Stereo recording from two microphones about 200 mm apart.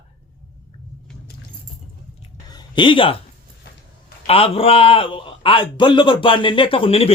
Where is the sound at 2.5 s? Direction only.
20° left (ahead or behind).